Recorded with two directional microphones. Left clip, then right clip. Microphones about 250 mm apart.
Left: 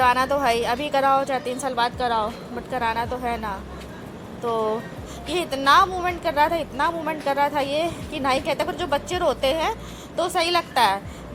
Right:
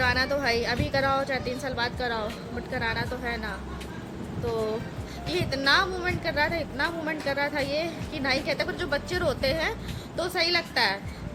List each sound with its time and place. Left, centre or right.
0.0 s a woman's voice: centre
5.3 s a woman's voice: centre